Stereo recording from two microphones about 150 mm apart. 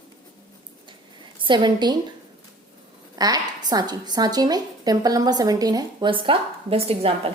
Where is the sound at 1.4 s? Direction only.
30° right (ahead or behind).